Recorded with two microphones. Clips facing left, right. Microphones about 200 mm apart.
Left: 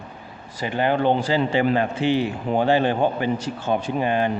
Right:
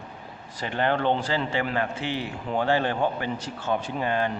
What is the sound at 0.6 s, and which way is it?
A man's voice, 10° left (ahead or behind).